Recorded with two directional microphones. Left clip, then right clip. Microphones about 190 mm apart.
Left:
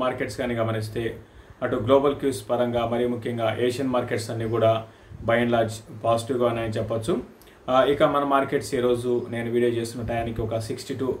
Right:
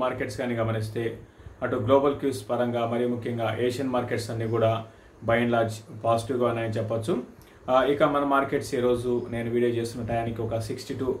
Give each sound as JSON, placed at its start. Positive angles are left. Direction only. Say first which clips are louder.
{"t": 0.0, "sound": "speech", "louder": "left 2 dB", "side_deg": 10}